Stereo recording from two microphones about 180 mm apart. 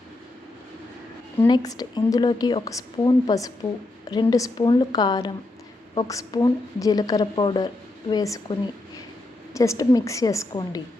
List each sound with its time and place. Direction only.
1.4 s a woman's voice: 25° left (ahead or behind)
9.6 s a woman's voice: 20° left (ahead or behind)